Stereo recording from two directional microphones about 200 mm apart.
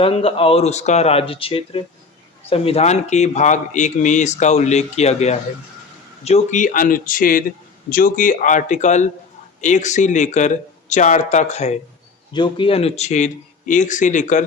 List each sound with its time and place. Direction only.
0.0 s speech: 30° left (ahead or behind)
12.3 s speech: 25° left (ahead or behind)